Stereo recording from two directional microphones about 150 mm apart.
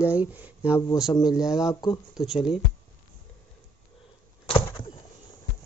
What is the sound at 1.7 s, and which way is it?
Speech, 25° left (ahead or behind).